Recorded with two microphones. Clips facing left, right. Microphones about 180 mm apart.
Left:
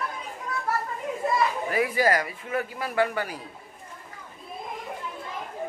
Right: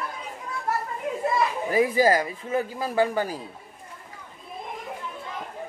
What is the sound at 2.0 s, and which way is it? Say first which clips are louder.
A man's voice: right 3 dB; 30° right (ahead or behind).